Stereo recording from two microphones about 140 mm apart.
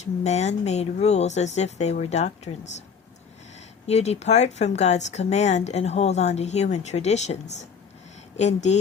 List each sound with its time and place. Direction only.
0.0 s speech: 55° left (ahead or behind)
3.8 s a woman's voice: 50° left (ahead or behind)